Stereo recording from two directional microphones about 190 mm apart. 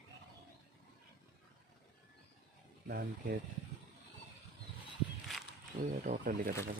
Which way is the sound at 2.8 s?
50° right (ahead or behind).